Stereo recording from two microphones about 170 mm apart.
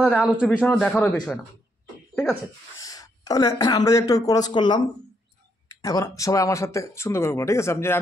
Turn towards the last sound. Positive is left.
turn(degrees=15)  # may be behind; listen again after turning